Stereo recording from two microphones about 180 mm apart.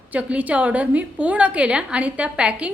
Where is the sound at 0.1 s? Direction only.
10° right (ahead or behind).